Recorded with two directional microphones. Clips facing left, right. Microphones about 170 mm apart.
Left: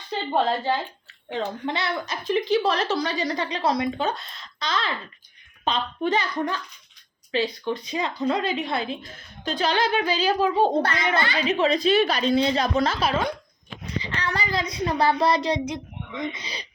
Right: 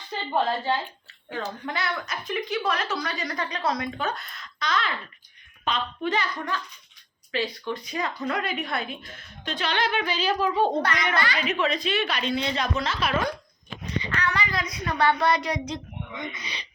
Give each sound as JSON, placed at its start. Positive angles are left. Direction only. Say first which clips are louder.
{"t": 1.3, "sound": "a woman's voice", "louder": "left 4 dB", "side_deg": 25}